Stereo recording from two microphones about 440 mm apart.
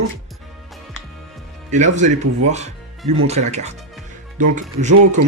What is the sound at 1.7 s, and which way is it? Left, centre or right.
Speech, centre.